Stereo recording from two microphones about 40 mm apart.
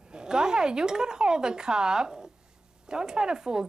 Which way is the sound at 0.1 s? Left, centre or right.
Centre.